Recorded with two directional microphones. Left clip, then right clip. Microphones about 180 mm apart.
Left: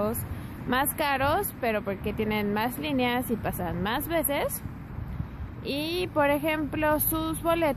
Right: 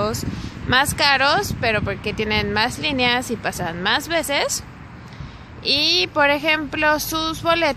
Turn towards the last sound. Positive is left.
turn(degrees=-5)  # may be behind; listen again after turning